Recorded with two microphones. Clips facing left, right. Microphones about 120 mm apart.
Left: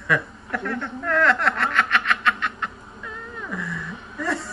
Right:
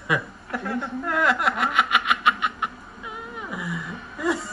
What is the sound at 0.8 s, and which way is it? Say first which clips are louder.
Snicker: left 3 dB; 5° right (ahead or behind).